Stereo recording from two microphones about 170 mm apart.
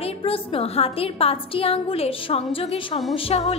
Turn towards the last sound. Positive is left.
turn(degrees=35)  # may be behind; listen again after turning